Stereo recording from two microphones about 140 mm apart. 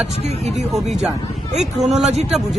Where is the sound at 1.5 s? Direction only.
5° right (ahead or behind).